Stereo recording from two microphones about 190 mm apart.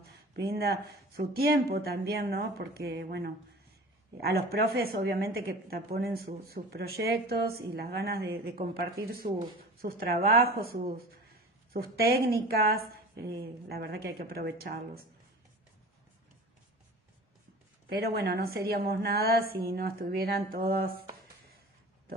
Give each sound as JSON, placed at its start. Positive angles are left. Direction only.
{"t": 0.0, "sound": "a woman's voice", "side_deg": -55}
{"t": 17.8, "sound": "a woman's voice", "side_deg": -55}